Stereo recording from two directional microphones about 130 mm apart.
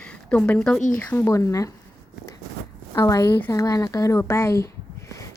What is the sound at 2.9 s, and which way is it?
Speech, 25° left (ahead or behind).